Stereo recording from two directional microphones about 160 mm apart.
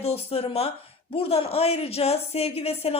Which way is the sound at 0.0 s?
35° left (ahead or behind).